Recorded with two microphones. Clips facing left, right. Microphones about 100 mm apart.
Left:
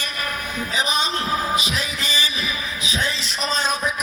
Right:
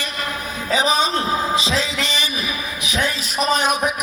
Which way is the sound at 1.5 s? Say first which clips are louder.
Right 4 dB; 30° right (ahead or behind).